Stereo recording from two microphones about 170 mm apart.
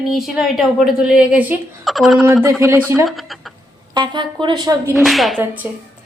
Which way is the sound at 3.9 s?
25° right (ahead or behind).